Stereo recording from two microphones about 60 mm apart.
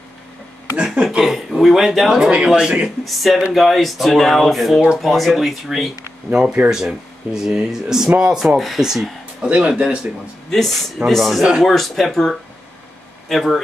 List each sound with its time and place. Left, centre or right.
0.7 s speech: centre
1.0 s speech: centre
3.1 s speech: centre
6.3 s speech: centre
10.5 s speech: centre